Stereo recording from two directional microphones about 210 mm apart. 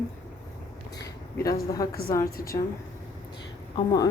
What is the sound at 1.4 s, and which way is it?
Speech, 15° left (ahead or behind).